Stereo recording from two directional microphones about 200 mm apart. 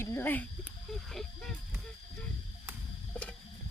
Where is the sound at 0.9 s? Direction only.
Centre (ahead or behind).